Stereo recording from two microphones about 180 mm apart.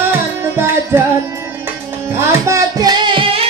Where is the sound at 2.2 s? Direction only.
15° right (ahead or behind).